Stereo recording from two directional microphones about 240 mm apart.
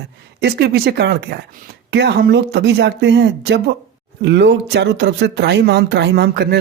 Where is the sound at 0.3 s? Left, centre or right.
Right.